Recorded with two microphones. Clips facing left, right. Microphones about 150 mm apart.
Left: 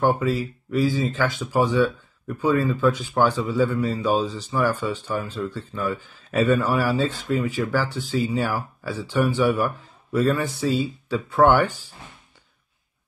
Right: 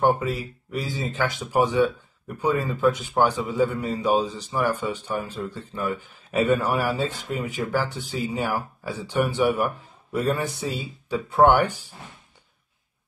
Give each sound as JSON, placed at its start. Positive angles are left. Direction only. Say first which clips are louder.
{"t": 0.7, "sound": "speech", "louder": "left 6 dB", "side_deg": -20}